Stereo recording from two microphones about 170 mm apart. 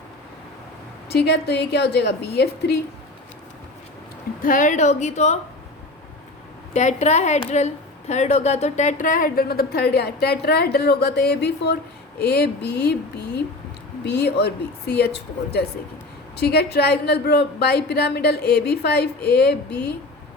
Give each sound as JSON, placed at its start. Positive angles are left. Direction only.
{"t": 1.1, "sound": "a woman's voice", "side_deg": 80}
{"t": 4.4, "sound": "a woman's voice", "side_deg": 50}
{"t": 6.7, "sound": "a woman's voice", "side_deg": 45}
{"t": 16.4, "sound": "a woman's voice", "side_deg": 70}